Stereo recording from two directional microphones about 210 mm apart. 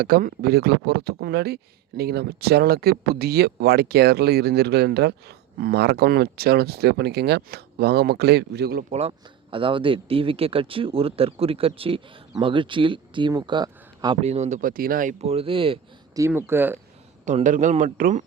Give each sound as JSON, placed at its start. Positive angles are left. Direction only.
{"t": 0.0, "sound": "speech", "side_deg": -45}
{"t": 8.9, "sound": "speech", "side_deg": -30}
{"t": 16.2, "sound": "speech", "side_deg": -10}
{"t": 17.2, "sound": "a man's voice", "side_deg": -35}